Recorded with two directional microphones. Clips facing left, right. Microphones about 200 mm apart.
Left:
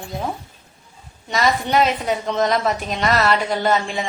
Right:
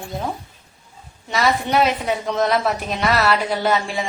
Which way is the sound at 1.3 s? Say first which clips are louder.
Even; centre (ahead or behind).